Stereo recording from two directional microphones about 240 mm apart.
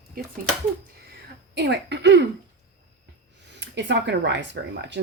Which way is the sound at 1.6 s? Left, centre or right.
Right.